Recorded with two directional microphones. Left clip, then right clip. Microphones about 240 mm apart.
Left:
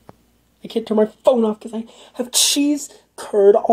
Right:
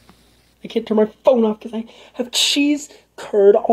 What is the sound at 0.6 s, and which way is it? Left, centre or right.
Speech, centre.